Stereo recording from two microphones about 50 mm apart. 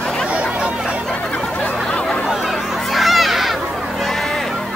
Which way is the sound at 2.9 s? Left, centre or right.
Centre.